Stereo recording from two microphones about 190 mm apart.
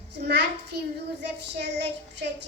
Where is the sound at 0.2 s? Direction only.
65° right (ahead or behind).